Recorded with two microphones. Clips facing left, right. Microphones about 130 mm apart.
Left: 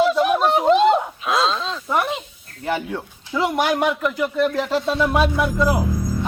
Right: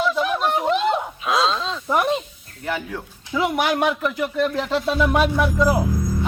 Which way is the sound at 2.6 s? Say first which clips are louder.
Left 3 dB; 25° left (ahead or behind).